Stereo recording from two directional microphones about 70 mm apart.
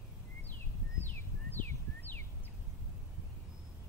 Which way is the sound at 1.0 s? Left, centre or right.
Left.